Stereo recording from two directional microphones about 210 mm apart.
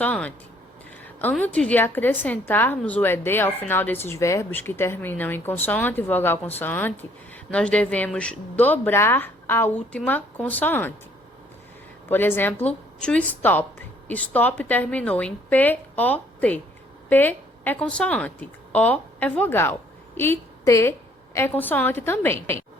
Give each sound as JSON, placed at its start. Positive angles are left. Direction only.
{"t": 0.0, "sound": "a woman's voice", "side_deg": 5}
{"t": 12.0, "sound": "a woman's voice", "side_deg": 10}